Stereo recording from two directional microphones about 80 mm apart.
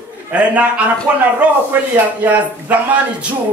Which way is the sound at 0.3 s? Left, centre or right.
Centre.